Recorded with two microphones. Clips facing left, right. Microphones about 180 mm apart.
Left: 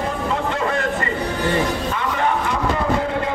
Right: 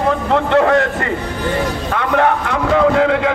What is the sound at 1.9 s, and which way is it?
Music, 65° right (ahead or behind).